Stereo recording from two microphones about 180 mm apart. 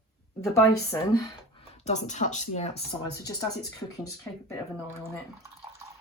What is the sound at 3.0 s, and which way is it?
Speech, 20° left (ahead or behind).